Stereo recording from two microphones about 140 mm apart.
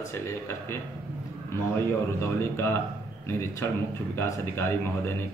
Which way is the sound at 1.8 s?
20° left (ahead or behind).